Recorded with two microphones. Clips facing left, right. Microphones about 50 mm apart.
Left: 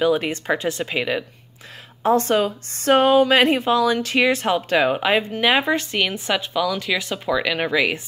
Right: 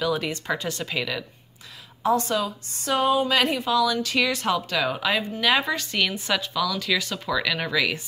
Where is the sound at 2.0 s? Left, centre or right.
Left.